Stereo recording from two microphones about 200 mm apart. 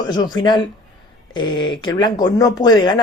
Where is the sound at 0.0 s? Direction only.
20° left (ahead or behind).